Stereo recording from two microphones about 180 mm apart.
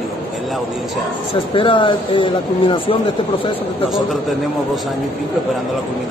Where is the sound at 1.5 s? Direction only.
30° left (ahead or behind).